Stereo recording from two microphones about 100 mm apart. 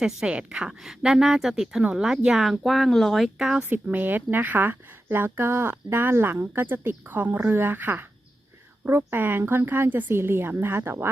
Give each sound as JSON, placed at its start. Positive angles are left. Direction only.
{"t": 0.0, "sound": "a woman's voice", "side_deg": -10}